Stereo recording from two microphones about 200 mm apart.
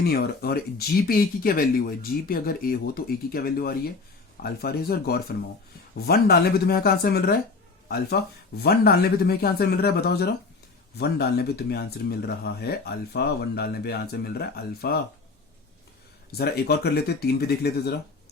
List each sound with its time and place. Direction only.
0.0 s speech: 50° left (ahead or behind)
16.4 s speech: 55° left (ahead or behind)